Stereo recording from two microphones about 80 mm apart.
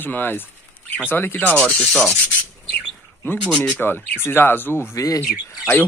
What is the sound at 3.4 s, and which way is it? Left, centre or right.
Speech, centre.